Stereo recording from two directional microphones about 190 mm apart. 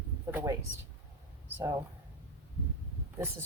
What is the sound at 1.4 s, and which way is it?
Speech, 10° right (ahead or behind).